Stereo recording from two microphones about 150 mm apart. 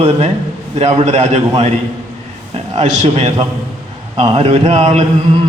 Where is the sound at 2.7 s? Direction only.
45° right (ahead or behind).